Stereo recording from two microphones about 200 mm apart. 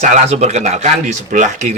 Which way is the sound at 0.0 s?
35° right (ahead or behind).